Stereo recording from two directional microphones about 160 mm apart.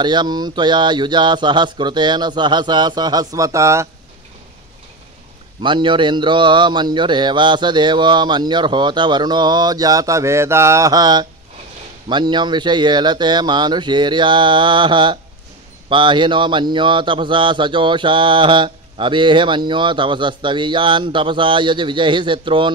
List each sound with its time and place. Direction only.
0.0 s speech: 30° right (ahead or behind)
5.6 s speech: 30° right (ahead or behind)